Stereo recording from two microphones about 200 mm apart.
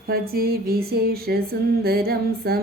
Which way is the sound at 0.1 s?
50° right (ahead or behind).